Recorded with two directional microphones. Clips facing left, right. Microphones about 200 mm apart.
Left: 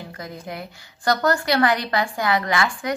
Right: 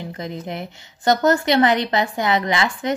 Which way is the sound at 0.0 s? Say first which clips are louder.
Right 5 dB; 20° right (ahead or behind).